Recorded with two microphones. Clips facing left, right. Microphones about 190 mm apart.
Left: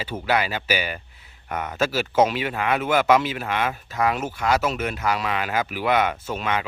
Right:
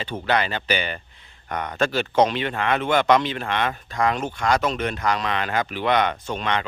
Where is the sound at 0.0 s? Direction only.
5° left (ahead or behind).